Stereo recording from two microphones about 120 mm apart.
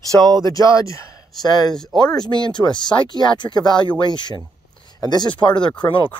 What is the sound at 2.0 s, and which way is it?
Speech, 35° left (ahead or behind).